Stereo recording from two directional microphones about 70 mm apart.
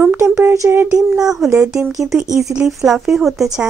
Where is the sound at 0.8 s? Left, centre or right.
Right.